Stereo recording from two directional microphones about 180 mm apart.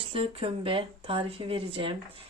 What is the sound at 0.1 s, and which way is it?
Speech, 30° right (ahead or behind).